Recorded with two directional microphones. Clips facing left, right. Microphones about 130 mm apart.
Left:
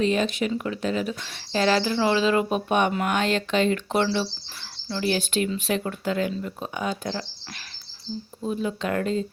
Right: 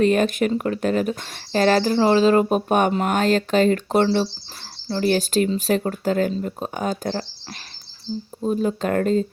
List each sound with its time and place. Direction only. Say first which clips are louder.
0.0 s speech: right 5 dB; 50° right (ahead or behind)
8.4 s speech: right 5 dB; 40° right (ahead or behind)